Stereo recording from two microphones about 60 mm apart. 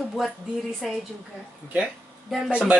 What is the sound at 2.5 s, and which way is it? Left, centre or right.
Speech, centre.